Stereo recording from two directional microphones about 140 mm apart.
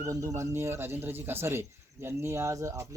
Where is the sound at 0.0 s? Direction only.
25° right (ahead or behind).